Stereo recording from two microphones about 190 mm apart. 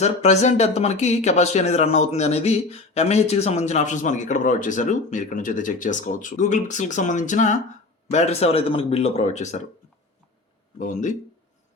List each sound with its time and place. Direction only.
0.0 s speech: 35° left (ahead or behind)
10.8 s speech: 40° left (ahead or behind)